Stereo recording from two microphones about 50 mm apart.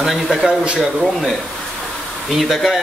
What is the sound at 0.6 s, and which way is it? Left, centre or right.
Speech, right.